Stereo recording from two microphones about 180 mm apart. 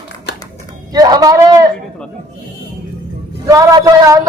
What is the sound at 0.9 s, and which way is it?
Speech, 20° right (ahead or behind).